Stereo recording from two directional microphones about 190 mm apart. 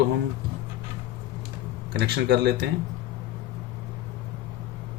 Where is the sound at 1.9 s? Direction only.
60° right (ahead or behind).